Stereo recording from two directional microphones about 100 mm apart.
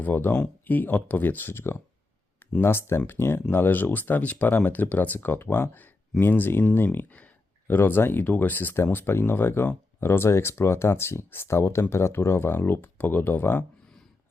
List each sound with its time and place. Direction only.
0.0 s speech: 20° left (ahead or behind)